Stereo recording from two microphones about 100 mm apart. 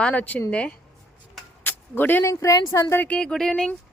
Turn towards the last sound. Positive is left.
turn(degrees=10)  # may be behind; listen again after turning